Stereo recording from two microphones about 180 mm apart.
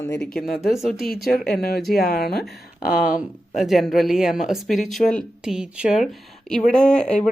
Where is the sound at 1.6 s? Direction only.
60° left (ahead or behind).